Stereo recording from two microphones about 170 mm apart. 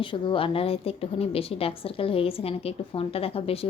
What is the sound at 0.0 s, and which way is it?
A woman's voice, 30° left (ahead or behind).